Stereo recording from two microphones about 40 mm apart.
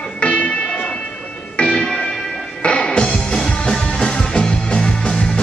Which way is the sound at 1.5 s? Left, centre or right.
Left.